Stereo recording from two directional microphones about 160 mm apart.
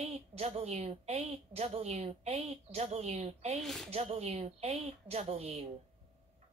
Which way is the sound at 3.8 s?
40° right (ahead or behind).